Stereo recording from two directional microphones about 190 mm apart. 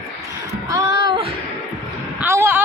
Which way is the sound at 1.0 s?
25° right (ahead or behind).